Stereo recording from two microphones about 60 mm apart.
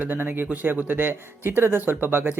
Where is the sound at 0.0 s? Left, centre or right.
Right.